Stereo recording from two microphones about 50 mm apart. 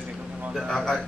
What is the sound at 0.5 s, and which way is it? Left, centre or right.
Speech, centre.